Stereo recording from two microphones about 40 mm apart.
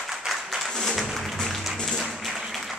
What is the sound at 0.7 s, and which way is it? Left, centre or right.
Music, centre.